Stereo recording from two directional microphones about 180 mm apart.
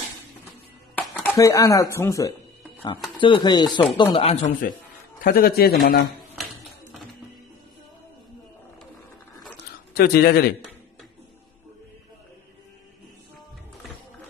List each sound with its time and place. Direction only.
0.9 s speech: 10° left (ahead or behind)
3.2 s speech: 25° left (ahead or behind)
5.2 s a man's voice: 55° left (ahead or behind)
9.9 s a man's voice: 60° left (ahead or behind)